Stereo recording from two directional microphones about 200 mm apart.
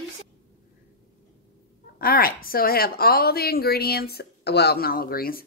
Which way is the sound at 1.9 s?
50° left (ahead or behind).